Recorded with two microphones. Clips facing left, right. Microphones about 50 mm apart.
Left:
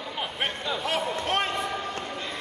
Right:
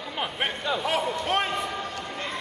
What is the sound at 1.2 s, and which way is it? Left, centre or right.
Basketball bounce, centre.